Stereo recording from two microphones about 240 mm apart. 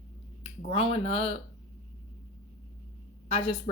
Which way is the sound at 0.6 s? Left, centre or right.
Left.